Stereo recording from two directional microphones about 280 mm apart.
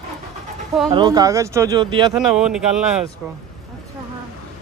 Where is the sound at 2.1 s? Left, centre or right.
Centre.